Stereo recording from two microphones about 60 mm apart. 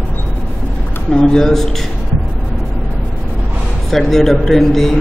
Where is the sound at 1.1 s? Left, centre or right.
Centre.